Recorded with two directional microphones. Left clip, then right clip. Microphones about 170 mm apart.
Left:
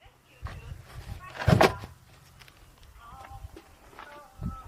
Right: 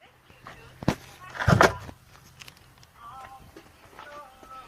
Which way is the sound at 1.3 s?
35° left (ahead or behind).